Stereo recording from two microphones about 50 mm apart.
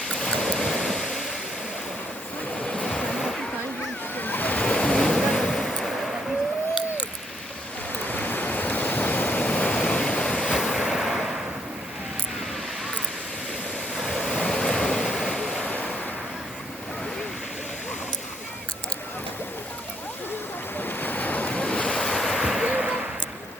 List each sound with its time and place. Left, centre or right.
0.2 s stream: centre
2.6 s vehicle: centre
4.1 s a sound: left
4.6 s waves: centre
8.0 s waves: left
10.4 s vehicle: centre
13.9 s waves: centre
15.6 s vehicle: left
20.7 s waves: left; by 22.4 s centre
22.4 s a sound: centre
22.6 s a sound: centre